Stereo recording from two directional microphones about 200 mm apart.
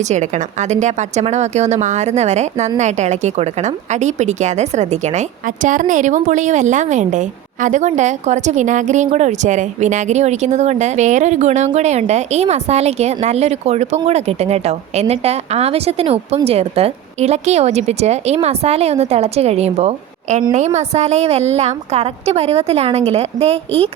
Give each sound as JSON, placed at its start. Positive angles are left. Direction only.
{"t": 0.1, "sound": "a woman's voice", "side_deg": -35}